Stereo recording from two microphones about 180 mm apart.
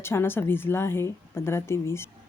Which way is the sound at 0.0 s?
15° left (ahead or behind).